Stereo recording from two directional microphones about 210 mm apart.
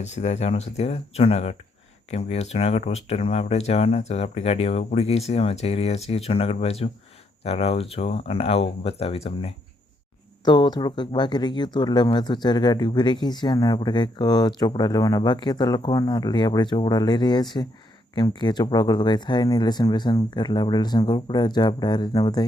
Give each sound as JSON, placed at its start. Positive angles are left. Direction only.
{"t": 0.0, "sound": "speech", "side_deg": 35}